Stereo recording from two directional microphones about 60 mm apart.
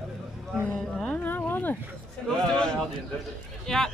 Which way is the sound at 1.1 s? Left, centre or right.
Left.